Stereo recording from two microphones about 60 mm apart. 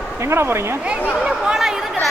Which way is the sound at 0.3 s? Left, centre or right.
Right.